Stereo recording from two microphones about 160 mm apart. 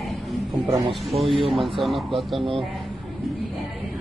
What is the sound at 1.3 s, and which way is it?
Speech, 35° right (ahead or behind).